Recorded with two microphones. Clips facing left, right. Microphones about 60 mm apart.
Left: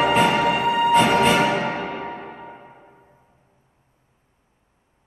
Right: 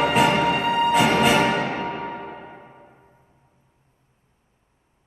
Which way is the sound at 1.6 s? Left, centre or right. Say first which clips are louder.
Left 1 dB; left.